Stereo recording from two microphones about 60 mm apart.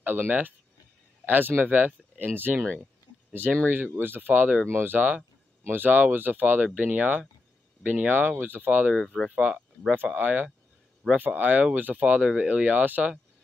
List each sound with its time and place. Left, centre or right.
0.0 s speech: right
8.9 s speech: centre
9.3 s speech: right